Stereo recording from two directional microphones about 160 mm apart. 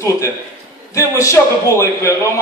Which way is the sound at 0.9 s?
20° left (ahead or behind).